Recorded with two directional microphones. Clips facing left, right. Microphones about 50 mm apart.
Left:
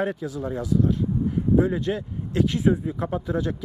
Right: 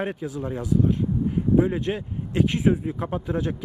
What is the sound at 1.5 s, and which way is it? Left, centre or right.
Speech, right.